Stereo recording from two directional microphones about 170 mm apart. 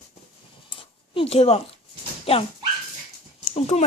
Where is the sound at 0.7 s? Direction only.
35° left (ahead or behind).